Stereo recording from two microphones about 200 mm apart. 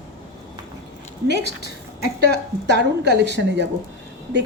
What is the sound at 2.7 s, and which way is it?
Speech, 60° right (ahead or behind).